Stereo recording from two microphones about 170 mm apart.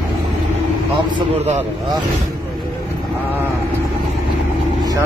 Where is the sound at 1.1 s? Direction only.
40° right (ahead or behind).